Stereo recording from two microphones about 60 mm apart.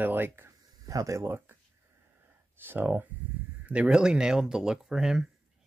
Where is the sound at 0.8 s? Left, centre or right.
Right.